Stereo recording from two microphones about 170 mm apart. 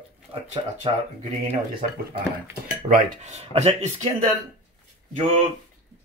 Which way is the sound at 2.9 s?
40° right (ahead or behind).